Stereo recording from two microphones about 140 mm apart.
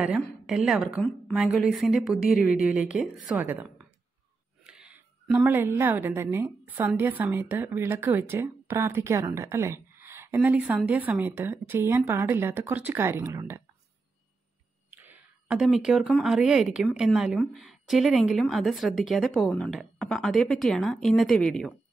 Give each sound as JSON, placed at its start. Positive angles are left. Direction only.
{"t": 0.2, "sound": "a woman's voice", "side_deg": -5}
{"t": 14.9, "sound": "a sound", "side_deg": -10}
{"t": 16.1, "sound": "a woman's voice", "side_deg": 0}